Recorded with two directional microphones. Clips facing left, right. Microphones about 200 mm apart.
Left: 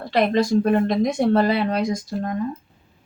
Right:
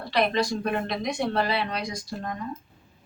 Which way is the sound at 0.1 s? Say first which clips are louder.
Left 6 dB; 50° left (ahead or behind).